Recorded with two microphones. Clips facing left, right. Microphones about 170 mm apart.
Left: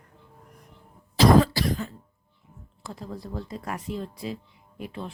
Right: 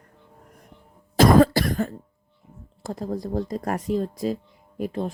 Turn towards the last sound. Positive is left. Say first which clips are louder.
# right 8 dB
turn(degrees=-45)  # may be behind; listen again after turning